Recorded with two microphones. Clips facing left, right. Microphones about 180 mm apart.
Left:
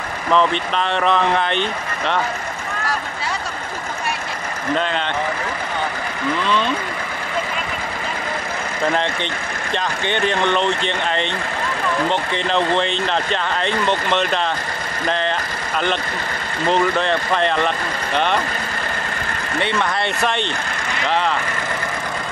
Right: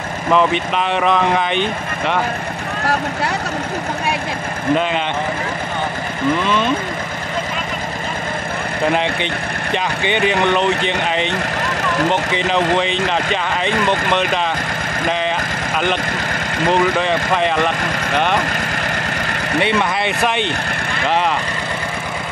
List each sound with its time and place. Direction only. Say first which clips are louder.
0.3 s speech: right 2 dB; 10° right (ahead or behind)
6.4 s speech: right 2 dB; 15° right (ahead or behind)
8.9 s speech: right 3 dB; 10° right (ahead or behind)
12.4 s speech: even; 5° right (ahead or behind)
16.7 s speech: right 1 dB; 5° right (ahead or behind)
19.6 s speech: right 2 dB; 15° right (ahead or behind)